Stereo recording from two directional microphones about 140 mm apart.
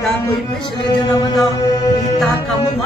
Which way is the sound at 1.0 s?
30° left (ahead or behind).